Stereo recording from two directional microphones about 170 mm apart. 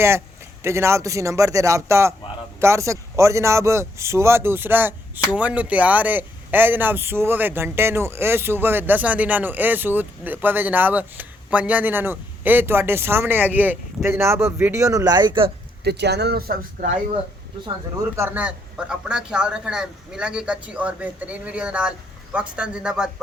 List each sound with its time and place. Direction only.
0.6 s speech: 15° right (ahead or behind)
15.8 s speech: 75° right (ahead or behind); by 16.9 s 60° right (ahead or behind)
17.9 s a man's voice: 15° right (ahead or behind)